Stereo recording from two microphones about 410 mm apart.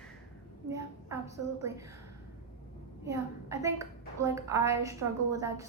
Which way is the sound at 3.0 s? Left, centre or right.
Centre.